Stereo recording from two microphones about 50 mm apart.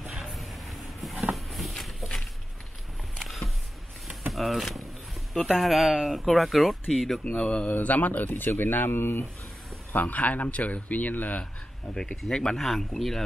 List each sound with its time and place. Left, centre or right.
0.1 s a sound: centre
3.3 s a sound: centre
4.3 s speech: centre
7.3 s speech: left
7.7 s speech: left
9.9 s speech: left
11.9 s speech: centre
12.5 s speech: centre